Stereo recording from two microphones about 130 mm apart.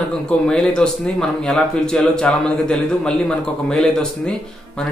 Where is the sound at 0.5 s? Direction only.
5° left (ahead or behind).